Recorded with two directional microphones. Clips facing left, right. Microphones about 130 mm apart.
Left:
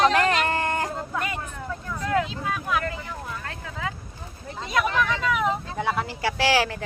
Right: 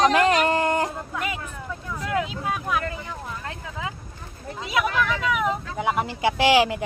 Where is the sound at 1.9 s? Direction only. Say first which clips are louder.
Left 1 dB; 15° right (ahead or behind).